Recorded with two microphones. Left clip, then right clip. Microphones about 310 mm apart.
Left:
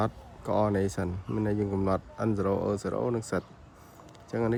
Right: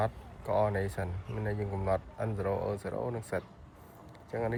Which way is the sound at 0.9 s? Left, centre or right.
Left.